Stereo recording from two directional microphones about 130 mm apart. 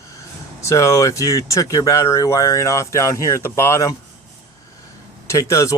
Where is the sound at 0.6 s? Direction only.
20° left (ahead or behind).